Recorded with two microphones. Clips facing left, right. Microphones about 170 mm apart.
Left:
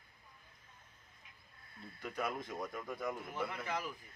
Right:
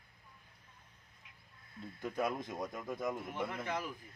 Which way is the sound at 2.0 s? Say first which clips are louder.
Right 4 dB; 25° right (ahead or behind).